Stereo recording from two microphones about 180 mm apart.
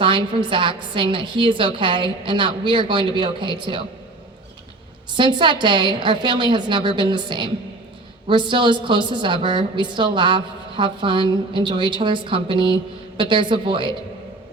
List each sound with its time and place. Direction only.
0.0 s a woman's voice: 25° right (ahead or behind)
5.1 s a woman's voice: 25° right (ahead or behind)